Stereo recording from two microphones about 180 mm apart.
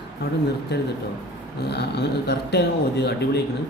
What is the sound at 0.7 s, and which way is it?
Speech, 70° left (ahead or behind).